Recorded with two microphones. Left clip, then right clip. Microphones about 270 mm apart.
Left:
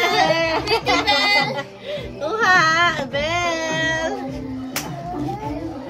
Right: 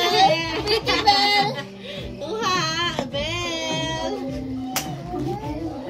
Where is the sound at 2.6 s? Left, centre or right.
Centre.